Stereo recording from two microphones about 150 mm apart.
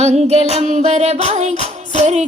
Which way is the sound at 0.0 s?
45° right (ahead or behind).